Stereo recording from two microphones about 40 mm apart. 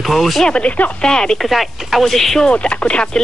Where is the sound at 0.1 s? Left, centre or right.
Centre.